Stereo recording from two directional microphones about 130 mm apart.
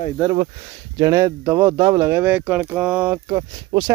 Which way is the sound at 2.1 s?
15° right (ahead or behind).